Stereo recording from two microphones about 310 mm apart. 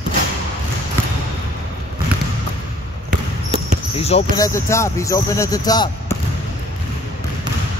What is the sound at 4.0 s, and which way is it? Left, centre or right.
Speech, centre.